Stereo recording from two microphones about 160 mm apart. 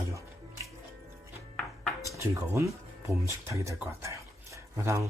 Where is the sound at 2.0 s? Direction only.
20° right (ahead or behind).